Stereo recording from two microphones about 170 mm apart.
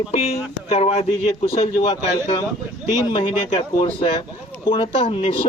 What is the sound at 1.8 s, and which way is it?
A man's voice, 25° left (ahead or behind).